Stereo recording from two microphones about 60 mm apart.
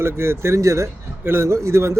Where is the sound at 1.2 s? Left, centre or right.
Right.